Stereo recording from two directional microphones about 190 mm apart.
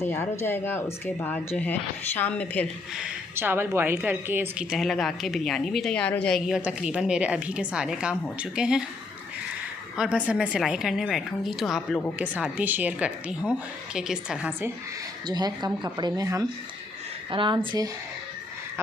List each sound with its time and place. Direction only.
0.0 s speech: 15° left (ahead or behind)
2.9 s a woman's voice: 5° right (ahead or behind)
10.2 s a woman's voice: 5° right (ahead or behind)
12.2 s a woman's voice: 10° right (ahead or behind)
15.3 s speech: 20° right (ahead or behind)